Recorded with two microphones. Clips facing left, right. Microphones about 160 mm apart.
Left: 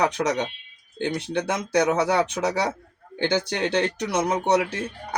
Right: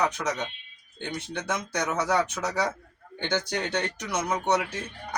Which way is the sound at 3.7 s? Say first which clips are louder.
Left 6 dB; 30° left (ahead or behind).